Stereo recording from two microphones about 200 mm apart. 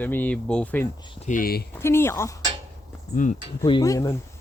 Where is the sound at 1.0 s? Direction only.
35° left (ahead or behind).